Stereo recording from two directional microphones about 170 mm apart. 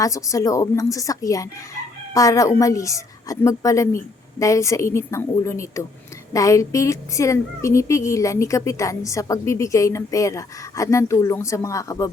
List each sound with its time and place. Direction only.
0.0 s a woman's voice: 20° left (ahead or behind)